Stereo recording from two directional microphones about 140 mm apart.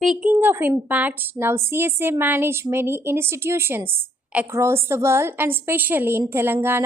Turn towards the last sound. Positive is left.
turn(degrees=-15)  # may be behind; listen again after turning